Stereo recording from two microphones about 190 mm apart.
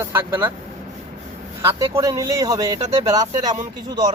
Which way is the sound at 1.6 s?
15° right (ahead or behind).